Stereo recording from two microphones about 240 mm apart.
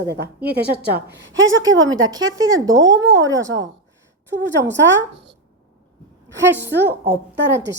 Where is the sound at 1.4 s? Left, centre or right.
Right.